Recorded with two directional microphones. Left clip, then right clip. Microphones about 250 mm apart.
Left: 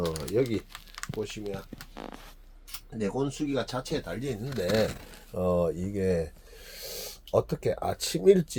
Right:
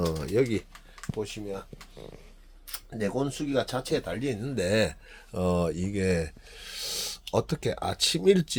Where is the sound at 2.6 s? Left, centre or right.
Centre.